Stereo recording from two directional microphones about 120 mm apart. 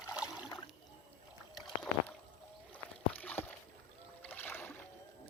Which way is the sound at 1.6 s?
Centre (ahead or behind).